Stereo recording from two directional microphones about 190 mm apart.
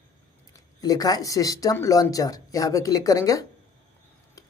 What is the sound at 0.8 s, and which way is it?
Speech, 20° left (ahead or behind).